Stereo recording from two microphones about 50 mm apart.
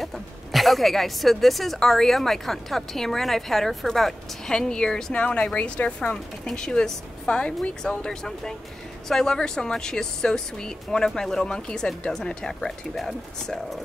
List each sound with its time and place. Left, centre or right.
0.0 s a woman's voice: centre
5.1 s a woman's voice: left; by 13.6 s centre